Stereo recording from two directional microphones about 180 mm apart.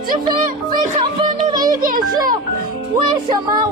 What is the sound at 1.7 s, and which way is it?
Speech, 50° right (ahead or behind).